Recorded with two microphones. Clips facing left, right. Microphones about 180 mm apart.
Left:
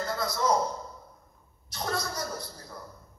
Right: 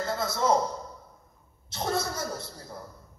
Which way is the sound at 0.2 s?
25° right (ahead or behind).